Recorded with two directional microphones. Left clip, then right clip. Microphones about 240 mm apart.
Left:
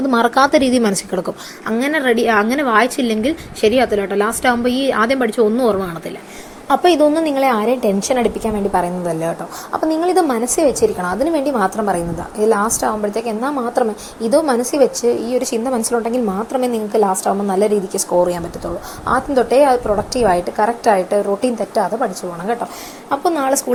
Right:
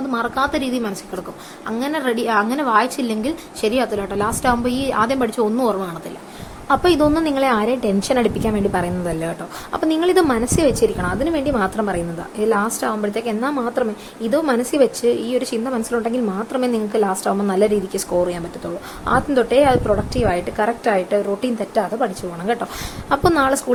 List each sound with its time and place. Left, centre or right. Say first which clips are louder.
0.1 s speech: left 8 dB; left
1.6 s a woman's voice: left 5 dB; centre